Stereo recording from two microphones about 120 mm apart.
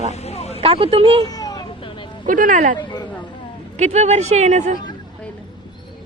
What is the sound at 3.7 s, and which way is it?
Speech, 75° right (ahead or behind).